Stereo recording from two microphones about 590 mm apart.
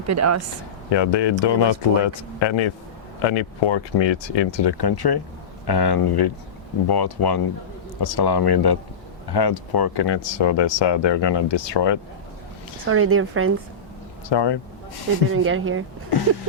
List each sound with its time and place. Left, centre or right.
0.1 s a woman's voice: right
0.9 s speech: left
12.9 s a woman's voice: right
14.3 s speech: left
15.3 s a woman's voice: right